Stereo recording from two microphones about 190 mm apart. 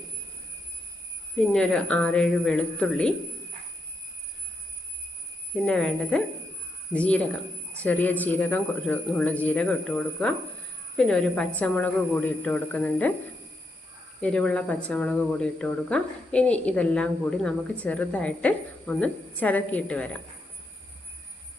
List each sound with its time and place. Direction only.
1.4 s speech: 5° left (ahead or behind)
5.6 s speech: 5° left (ahead or behind)
14.2 s speech: 5° left (ahead or behind)